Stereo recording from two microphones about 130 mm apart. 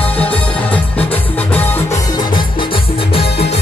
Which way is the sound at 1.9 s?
25° left (ahead or behind).